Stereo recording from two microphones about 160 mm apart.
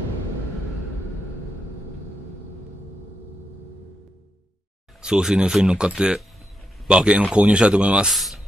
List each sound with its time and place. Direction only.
5.0 s speech: 5° right (ahead or behind)